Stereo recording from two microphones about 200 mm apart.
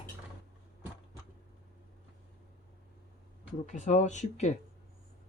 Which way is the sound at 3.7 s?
40° left (ahead or behind).